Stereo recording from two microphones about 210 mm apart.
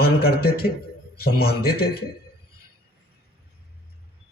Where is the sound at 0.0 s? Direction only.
45° left (ahead or behind).